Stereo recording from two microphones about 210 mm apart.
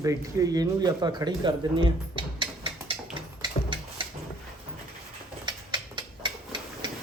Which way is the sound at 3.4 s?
25° right (ahead or behind).